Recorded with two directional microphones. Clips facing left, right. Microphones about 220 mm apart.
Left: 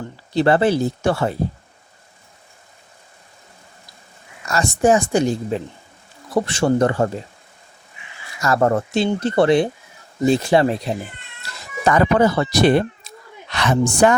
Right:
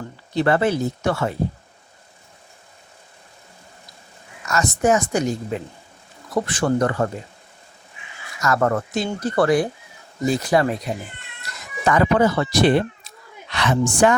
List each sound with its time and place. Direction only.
0.3 s speech: 30° left (ahead or behind)
4.4 s speech: 30° left (ahead or behind)
8.4 s speech: 30° left (ahead or behind)